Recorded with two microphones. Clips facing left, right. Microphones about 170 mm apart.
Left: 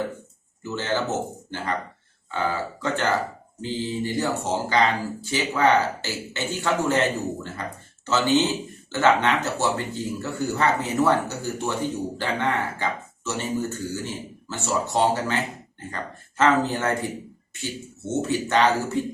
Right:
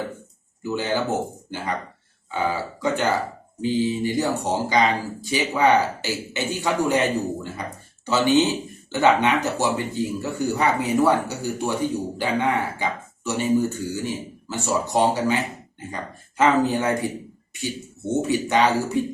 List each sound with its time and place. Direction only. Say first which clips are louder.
0.6 s speech: right 2 dB; 15° right (ahead or behind)
8.0 s speech: right 2 dB; 15° right (ahead or behind)
16.4 s speech: right 2 dB; 15° right (ahead or behind)